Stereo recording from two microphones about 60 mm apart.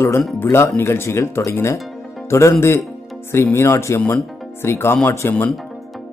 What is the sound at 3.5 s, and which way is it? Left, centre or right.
Speech, left.